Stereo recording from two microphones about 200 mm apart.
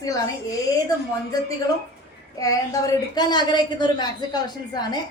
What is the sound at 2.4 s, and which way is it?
A woman's voice, 15° left (ahead or behind).